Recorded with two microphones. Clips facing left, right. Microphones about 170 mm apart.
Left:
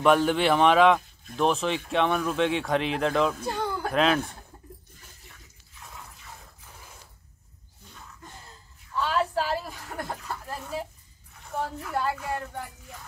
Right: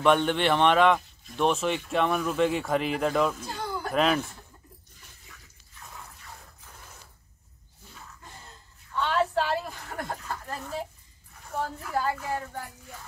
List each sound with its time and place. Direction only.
0.0 s speech: centre (ahead or behind)
3.3 s speech: 60° left (ahead or behind)
3.9 s speech: centre (ahead or behind)
8.9 s a sound: 5° left (ahead or behind)